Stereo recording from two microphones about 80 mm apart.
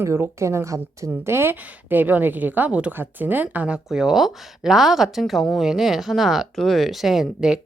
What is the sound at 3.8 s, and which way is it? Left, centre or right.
A woman's voice, centre.